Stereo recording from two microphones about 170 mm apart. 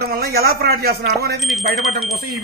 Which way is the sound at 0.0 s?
60° right (ahead or behind).